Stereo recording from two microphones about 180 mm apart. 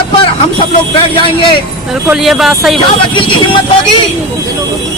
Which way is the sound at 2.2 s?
Centre (ahead or behind).